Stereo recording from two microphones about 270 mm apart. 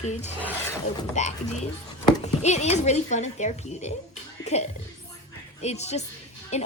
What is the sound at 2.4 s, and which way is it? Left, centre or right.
Speech, left.